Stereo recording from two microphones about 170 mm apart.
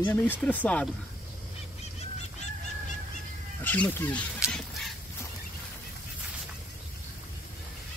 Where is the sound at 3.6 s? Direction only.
10° left (ahead or behind).